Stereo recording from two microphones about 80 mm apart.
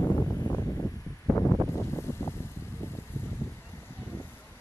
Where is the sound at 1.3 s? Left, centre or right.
Left.